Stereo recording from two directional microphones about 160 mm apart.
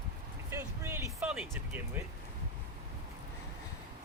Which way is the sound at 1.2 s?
5° right (ahead or behind).